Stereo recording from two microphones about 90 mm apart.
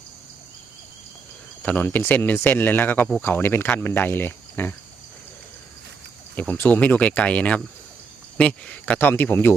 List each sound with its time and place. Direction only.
1.6 s speech: 20° left (ahead or behind)
6.5 s speech: 20° left (ahead or behind)